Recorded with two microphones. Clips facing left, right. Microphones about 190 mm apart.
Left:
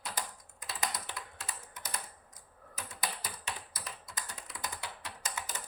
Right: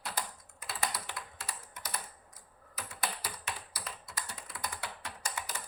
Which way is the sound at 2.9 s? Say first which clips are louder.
Right 1 dB; 20° left (ahead or behind).